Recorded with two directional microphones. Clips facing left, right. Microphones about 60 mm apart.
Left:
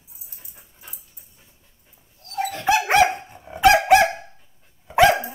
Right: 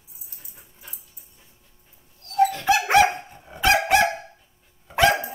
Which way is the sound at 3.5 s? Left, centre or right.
Centre.